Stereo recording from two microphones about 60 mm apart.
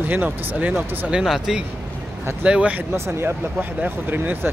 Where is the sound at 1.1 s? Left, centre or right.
Centre.